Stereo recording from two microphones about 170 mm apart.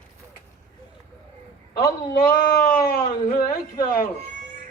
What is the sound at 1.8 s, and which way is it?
A man's voice, 60° left (ahead or behind).